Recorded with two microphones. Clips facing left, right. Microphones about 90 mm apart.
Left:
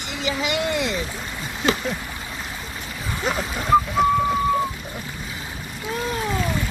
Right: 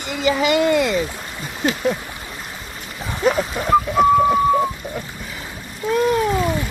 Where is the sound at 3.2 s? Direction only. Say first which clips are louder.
Right 8 dB; 45° right (ahead or behind).